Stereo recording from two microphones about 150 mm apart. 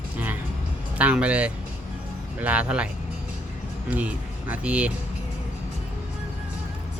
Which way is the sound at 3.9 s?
10° right (ahead or behind).